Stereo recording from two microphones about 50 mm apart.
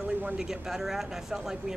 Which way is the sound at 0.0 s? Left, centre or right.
Right.